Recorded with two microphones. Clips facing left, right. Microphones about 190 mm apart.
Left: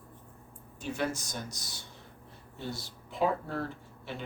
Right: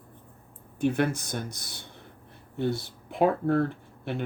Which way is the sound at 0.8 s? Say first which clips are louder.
Right 8 dB; 60° right (ahead or behind).